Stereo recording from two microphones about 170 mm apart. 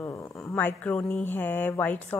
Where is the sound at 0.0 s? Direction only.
15° left (ahead or behind).